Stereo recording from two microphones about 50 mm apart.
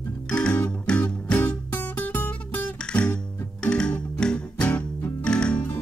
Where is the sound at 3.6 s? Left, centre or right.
Centre.